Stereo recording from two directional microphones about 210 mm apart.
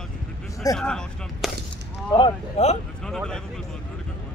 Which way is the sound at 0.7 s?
5° left (ahead or behind).